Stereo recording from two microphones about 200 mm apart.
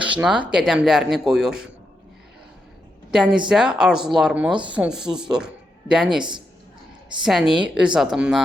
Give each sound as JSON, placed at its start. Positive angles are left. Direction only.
{"t": 0.0, "sound": "speech", "side_deg": -5}
{"t": 3.1, "sound": "speech", "side_deg": -5}
{"t": 7.2, "sound": "speech", "side_deg": 0}